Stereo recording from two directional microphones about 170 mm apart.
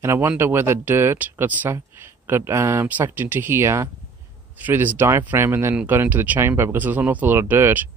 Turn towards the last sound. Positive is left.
turn(degrees=-10)  # may be behind; listen again after turning